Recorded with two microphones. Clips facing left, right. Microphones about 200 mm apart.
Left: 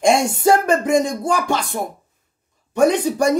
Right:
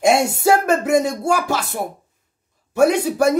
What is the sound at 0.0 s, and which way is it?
Speech, 5° right (ahead or behind).